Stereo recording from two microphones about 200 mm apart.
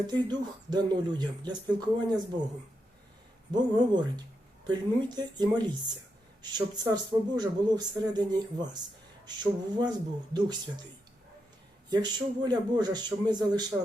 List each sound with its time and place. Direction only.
0.1 s speech: 20° right (ahead or behind)
3.5 s speech: 20° right (ahead or behind)
11.9 s speech: 20° right (ahead or behind)